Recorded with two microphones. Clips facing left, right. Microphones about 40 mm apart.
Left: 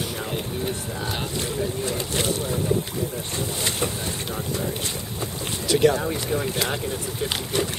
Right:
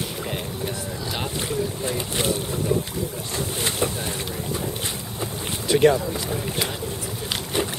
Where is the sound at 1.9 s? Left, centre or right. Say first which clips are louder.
Right 1 dB; centre.